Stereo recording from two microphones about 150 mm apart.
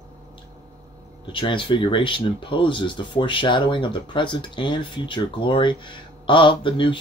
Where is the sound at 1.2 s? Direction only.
35° left (ahead or behind).